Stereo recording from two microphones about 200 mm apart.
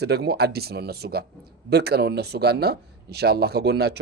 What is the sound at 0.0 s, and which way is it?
Speech, 55° right (ahead or behind).